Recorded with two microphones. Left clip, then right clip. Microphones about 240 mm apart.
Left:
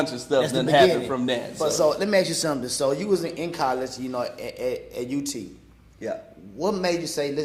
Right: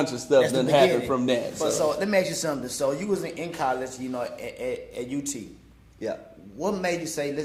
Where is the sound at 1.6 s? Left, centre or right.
Left.